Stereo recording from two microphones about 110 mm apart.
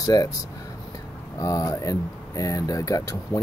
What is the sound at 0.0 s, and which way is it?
Speech, 35° left (ahead or behind).